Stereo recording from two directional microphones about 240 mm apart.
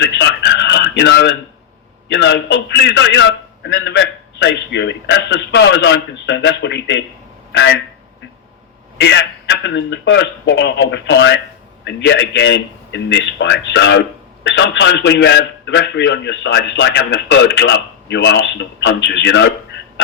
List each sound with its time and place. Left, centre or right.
0.0 s a sound: left
2.0 s a man's voice: left
9.0 s a man's voice: left